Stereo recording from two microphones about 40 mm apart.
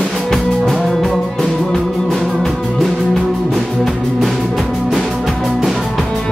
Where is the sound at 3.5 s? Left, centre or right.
Centre.